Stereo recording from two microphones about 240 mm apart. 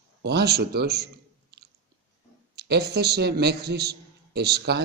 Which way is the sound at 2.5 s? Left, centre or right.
Right.